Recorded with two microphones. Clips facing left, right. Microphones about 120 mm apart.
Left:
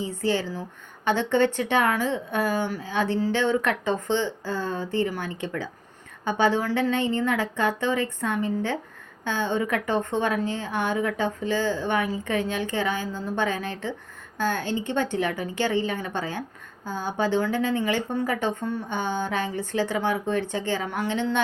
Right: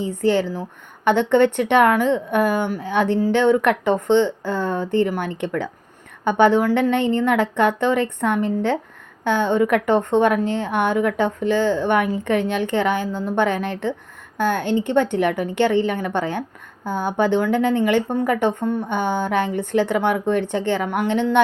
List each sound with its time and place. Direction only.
0.0 s a woman's voice: 55° right (ahead or behind)
14.6 s a woman's voice: 20° right (ahead or behind)
14.8 s a woman's voice: 55° right (ahead or behind)